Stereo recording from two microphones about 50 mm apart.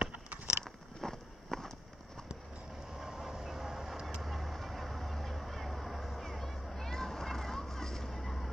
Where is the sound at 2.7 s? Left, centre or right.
Centre.